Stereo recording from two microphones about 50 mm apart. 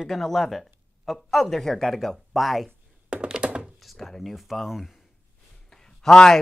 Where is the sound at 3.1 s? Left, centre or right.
Centre.